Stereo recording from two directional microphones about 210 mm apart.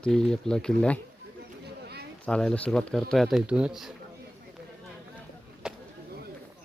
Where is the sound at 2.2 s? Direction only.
5° left (ahead or behind).